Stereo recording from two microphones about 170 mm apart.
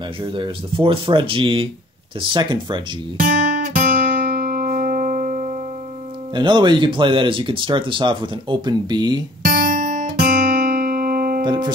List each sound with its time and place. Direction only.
0.2 s speech: 30° right (ahead or behind)
3.2 s guitar: 55° right (ahead or behind)
4.4 s music: 60° right (ahead or behind)
6.3 s speech: 25° right (ahead or behind)
9.4 s guitar: 65° right (ahead or behind)
11.4 s speech: 25° right (ahead or behind)